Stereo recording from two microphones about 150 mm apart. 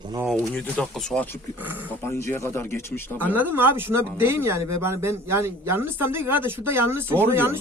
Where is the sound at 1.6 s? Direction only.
10° right (ahead or behind).